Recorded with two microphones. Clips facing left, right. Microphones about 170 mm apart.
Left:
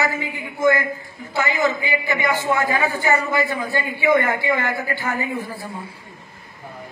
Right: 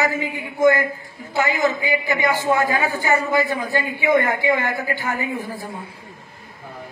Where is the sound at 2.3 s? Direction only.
15° right (ahead or behind).